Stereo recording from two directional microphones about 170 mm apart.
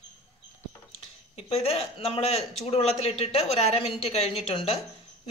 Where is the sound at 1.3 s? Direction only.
35° left (ahead or behind).